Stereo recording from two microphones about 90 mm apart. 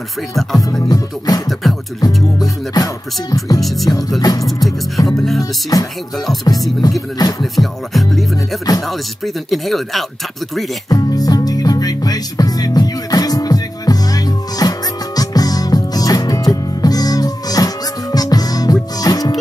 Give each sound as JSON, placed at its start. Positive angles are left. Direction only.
{"t": 0.8, "sound": "music", "side_deg": 45}
{"t": 2.7, "sound": "music", "side_deg": 45}
{"t": 3.6, "sound": "speech", "side_deg": 0}
{"t": 4.2, "sound": "music", "side_deg": 45}
{"t": 4.6, "sound": "speech", "side_deg": 0}
{"t": 5.4, "sound": "music", "side_deg": 45}
{"t": 7.5, "sound": "speech", "side_deg": 0}
{"t": 10.9, "sound": "music", "side_deg": 45}